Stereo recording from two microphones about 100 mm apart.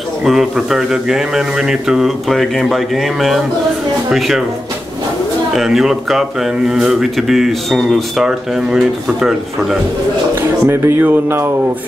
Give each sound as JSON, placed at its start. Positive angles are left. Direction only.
{"t": 0.2, "sound": "speech", "side_deg": -5}
{"t": 5.6, "sound": "speech", "side_deg": 0}
{"t": 10.3, "sound": "speech", "side_deg": -25}